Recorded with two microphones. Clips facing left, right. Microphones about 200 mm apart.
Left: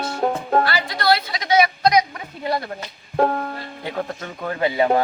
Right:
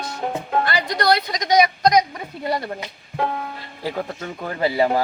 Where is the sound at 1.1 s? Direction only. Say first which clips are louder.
Right 2 dB; 45° right (ahead or behind).